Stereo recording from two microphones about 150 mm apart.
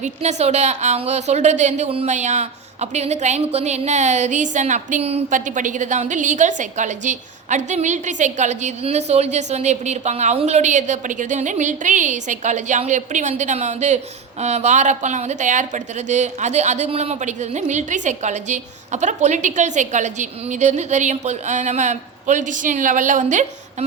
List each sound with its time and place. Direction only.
0.0 s speech: 50° right (ahead or behind)